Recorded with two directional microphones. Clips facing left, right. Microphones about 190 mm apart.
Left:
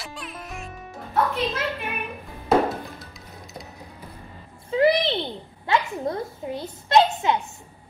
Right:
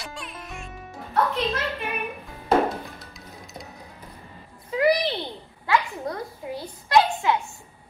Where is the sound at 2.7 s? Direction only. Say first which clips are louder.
Left 1 dB; centre (ahead or behind).